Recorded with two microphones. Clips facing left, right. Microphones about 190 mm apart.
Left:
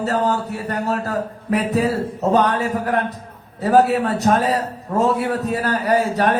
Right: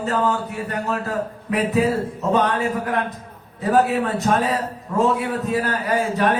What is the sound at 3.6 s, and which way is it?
Speech, 40° left (ahead or behind).